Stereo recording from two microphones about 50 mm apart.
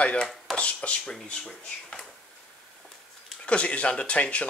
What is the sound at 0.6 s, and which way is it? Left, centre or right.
Speech, left.